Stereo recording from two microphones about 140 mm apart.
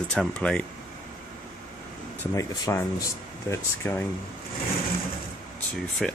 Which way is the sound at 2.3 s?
20° left (ahead or behind).